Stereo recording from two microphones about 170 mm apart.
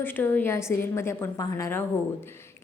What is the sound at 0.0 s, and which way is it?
A woman's voice, 10° left (ahead or behind).